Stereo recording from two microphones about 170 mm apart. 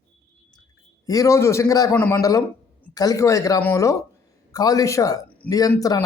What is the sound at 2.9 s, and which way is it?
Speech, 20° left (ahead or behind).